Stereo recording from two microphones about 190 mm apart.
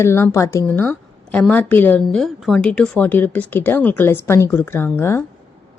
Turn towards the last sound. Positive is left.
turn(degrees=15)  # may be behind; listen again after turning